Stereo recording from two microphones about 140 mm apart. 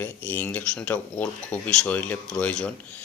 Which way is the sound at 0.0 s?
15° left (ahead or behind).